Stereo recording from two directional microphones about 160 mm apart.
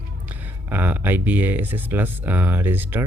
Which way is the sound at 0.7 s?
10° right (ahead or behind).